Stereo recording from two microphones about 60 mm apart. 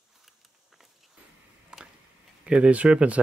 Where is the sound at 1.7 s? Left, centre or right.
Centre.